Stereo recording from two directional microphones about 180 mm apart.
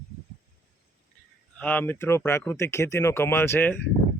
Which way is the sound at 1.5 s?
10° left (ahead or behind).